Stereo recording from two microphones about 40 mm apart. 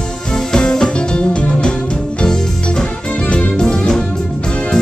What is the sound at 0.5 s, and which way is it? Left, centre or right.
Music, centre.